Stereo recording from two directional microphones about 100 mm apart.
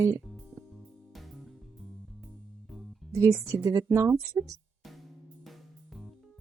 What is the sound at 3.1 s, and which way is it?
Speech, 30° right (ahead or behind).